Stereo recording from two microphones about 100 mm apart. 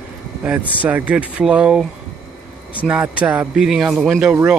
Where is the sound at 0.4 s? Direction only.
15° right (ahead or behind).